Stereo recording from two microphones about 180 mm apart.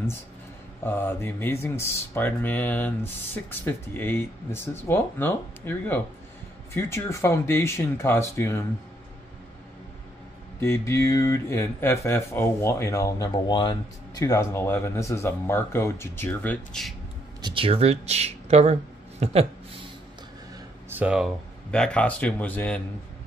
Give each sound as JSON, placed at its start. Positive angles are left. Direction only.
{"t": 0.8, "sound": "speech", "side_deg": 10}
{"t": 10.6, "sound": "speech", "side_deg": 15}
{"t": 17.4, "sound": "speech", "side_deg": -25}
{"t": 20.9, "sound": "speech", "side_deg": -5}